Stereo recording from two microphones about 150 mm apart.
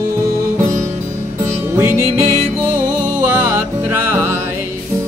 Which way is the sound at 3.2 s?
15° right (ahead or behind).